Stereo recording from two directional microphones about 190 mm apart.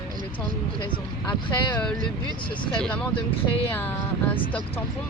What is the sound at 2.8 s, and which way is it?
Speech, 5° left (ahead or behind).